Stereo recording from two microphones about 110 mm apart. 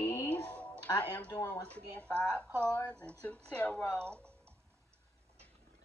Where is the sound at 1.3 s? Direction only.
30° left (ahead or behind).